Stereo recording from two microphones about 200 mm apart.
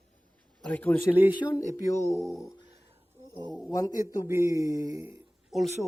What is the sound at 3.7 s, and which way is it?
Speech, 20° left (ahead or behind).